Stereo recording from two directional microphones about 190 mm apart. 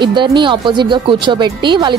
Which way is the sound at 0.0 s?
25° right (ahead or behind).